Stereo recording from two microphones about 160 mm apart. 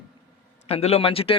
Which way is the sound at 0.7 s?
40° left (ahead or behind).